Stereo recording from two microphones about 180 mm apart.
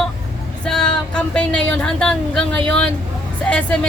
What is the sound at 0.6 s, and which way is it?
Speech, 5° left (ahead or behind).